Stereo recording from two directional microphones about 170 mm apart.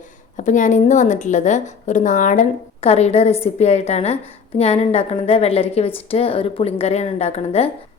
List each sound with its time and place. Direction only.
0.3 s a woman's voice: 50° left (ahead or behind)